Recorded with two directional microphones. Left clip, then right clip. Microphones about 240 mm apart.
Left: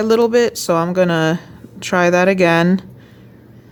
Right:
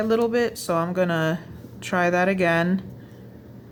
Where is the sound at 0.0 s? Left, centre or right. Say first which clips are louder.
Left 8 dB; left.